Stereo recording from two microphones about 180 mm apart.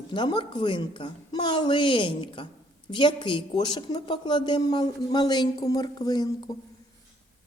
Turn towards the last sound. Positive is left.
turn(degrees=20)  # may be behind; listen again after turning